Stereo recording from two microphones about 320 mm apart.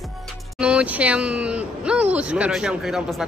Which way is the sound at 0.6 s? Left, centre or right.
Centre.